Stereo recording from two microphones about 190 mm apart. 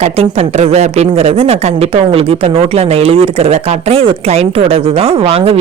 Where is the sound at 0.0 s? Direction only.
30° right (ahead or behind).